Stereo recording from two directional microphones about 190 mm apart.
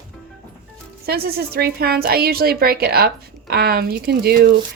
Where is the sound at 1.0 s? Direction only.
55° right (ahead or behind).